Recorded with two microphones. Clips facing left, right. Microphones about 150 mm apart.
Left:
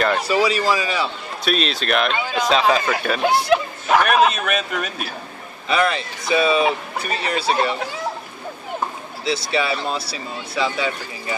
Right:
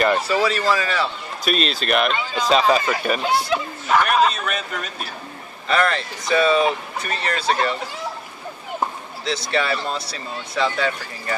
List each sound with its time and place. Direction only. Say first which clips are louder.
0.2 s speech: left 1 dB; 10° left (ahead or behind)
1.4 s speech: even; centre (ahead or behind)
3.2 s a sound: left 4 dB; 60° left (ahead or behind)
5.7 s speech: even; 10° left (ahead or behind)
9.2 s speech: left 1 dB; 10° left (ahead or behind)